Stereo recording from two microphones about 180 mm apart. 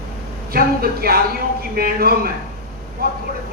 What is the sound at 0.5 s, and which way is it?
Speech, 55° right (ahead or behind).